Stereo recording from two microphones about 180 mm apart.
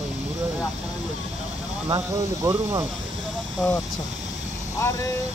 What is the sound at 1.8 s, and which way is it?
Speech, 20° right (ahead or behind).